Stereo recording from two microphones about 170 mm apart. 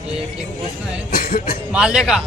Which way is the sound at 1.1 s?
55° left (ahead or behind).